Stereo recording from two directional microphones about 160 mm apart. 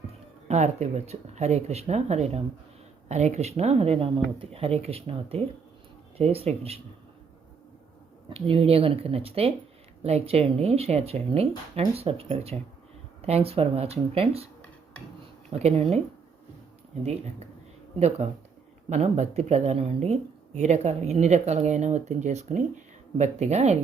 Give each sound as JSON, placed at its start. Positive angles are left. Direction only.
{"t": 0.4, "sound": "speech", "side_deg": -45}
{"t": 8.3, "sound": "speech", "side_deg": -35}
{"t": 15.4, "sound": "speech", "side_deg": -40}
{"t": 18.9, "sound": "speech", "side_deg": -45}